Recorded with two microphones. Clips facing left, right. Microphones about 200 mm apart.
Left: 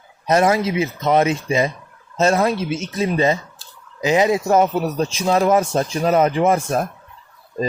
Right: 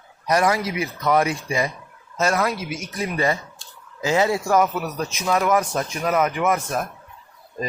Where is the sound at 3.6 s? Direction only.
Centre (ahead or behind).